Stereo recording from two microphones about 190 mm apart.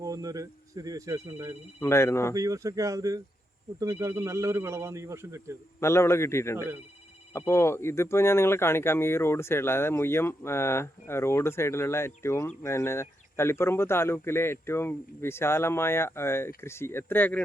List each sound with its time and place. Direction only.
0.0 s speech: 20° right (ahead or behind)
1.8 s speech: 15° left (ahead or behind)
2.3 s speech: 15° right (ahead or behind)
5.8 s speech: 15° left (ahead or behind)